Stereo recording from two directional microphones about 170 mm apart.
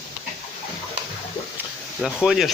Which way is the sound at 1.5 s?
5° right (ahead or behind).